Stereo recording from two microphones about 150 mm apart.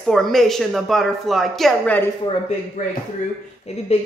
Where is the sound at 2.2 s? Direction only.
50° left (ahead or behind).